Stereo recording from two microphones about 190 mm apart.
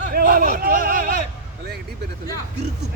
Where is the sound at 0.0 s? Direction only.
45° right (ahead or behind).